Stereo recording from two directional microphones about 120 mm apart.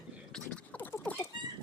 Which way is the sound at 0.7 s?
15° left (ahead or behind).